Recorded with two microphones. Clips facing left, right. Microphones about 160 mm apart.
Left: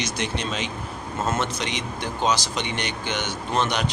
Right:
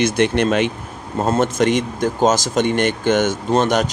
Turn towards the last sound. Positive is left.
turn(degrees=-45)  # may be behind; listen again after turning